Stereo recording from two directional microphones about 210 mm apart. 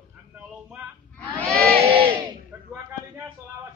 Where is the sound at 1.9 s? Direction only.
25° right (ahead or behind).